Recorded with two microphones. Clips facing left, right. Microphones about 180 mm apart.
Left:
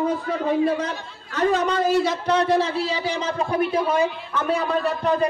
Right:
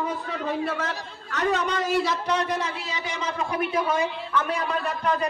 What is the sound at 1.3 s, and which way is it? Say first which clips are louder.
A man's voice: left 4 dB; 35° left (ahead or behind).